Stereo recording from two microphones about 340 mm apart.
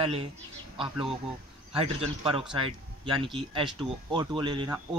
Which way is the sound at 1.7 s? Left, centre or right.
Centre.